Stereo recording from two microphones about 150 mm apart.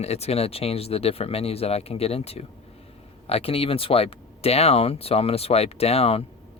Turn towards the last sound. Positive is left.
turn(degrees=40)  # may be behind; listen again after turning